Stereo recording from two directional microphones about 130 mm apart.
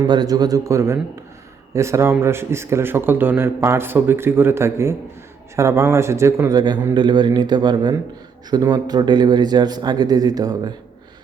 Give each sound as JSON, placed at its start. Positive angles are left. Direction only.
{"t": 0.0, "sound": "a man's voice", "side_deg": -30}
{"t": 6.9, "sound": "speech", "side_deg": -35}